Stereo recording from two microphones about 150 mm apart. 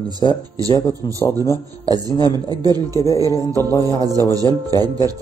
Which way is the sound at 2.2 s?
25° right (ahead or behind).